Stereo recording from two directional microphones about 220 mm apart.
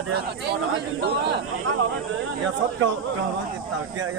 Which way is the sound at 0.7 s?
55° right (ahead or behind).